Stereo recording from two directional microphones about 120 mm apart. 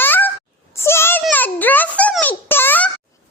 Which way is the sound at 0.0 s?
15° left (ahead or behind).